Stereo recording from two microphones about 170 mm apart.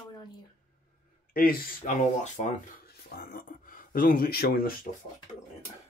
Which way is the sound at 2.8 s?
65° left (ahead or behind).